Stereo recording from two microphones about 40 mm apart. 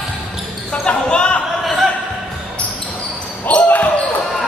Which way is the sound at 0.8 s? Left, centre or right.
Left.